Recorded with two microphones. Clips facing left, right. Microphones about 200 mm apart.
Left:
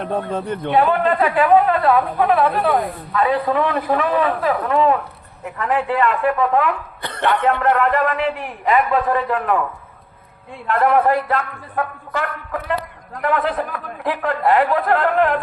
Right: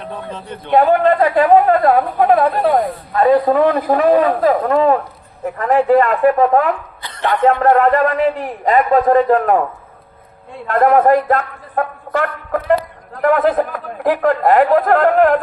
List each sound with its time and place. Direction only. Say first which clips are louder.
0.0 s a man's voice: left 6 dB; 55° left (ahead or behind)
0.7 s a man's voice: right 5 dB; 40° right (ahead or behind)
7.0 s a sound: left 1 dB; 60° left (ahead or behind)
7.6 s a man's voice: right 5 dB; 40° right (ahead or behind)
10.7 s a man's voice: right 4 dB; 40° right (ahead or behind)